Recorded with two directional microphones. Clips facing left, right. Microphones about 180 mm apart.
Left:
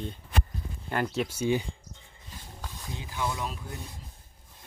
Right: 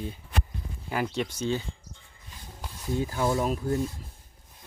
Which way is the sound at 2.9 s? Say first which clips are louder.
Right 8 dB; 40° right (ahead or behind).